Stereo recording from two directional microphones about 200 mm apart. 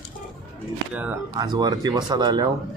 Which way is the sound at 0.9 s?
5° right (ahead or behind).